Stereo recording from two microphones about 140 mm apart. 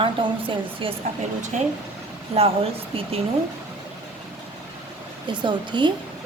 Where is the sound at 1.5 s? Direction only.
55° right (ahead or behind).